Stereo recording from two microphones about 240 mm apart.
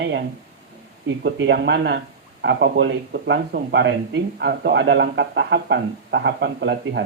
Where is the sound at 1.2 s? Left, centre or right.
Right.